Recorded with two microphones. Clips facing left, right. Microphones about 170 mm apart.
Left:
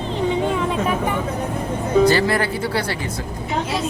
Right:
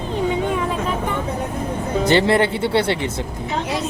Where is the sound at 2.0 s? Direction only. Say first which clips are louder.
Right 1 dB; 25° right (ahead or behind).